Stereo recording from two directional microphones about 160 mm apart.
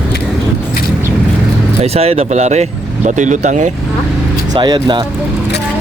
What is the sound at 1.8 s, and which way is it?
Speech, 40° right (ahead or behind).